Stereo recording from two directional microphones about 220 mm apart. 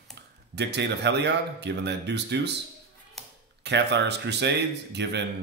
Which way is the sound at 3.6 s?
50° right (ahead or behind).